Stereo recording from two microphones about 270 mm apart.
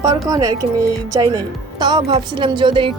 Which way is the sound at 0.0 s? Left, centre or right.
Centre.